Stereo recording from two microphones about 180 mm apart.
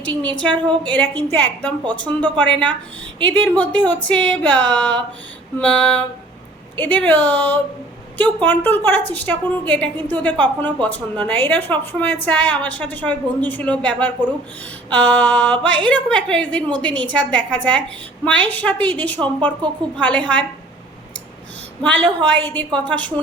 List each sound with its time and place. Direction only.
0.0 s a woman's voice: 10° left (ahead or behind)
1.8 s speech: 25° right (ahead or behind)
2.2 s a woman's voice: 5° left (ahead or behind)
21.8 s a woman's voice: 10° left (ahead or behind)